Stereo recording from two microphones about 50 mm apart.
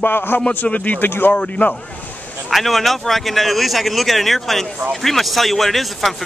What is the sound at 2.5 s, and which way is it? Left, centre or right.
Speech, centre.